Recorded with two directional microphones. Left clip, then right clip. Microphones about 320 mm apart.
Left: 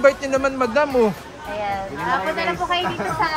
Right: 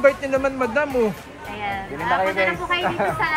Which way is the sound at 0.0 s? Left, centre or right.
Centre.